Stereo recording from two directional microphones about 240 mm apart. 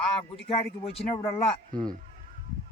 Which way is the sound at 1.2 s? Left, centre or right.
Centre.